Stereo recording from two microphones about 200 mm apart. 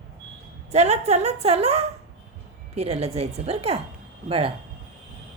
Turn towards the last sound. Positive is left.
turn(degrees=-25)  # may be behind; listen again after turning